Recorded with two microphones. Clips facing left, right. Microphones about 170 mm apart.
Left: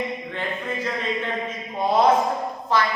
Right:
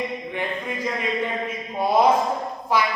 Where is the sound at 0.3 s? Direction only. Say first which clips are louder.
Even; 10° right (ahead or behind).